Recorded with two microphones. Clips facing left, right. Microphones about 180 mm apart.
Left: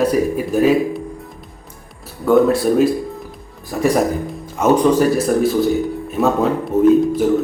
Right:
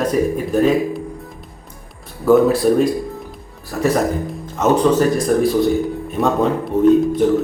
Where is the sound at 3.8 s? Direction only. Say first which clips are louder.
Left 1 dB; 15° left (ahead or behind).